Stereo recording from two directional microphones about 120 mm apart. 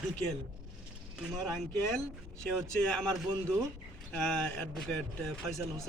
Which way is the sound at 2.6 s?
5° left (ahead or behind).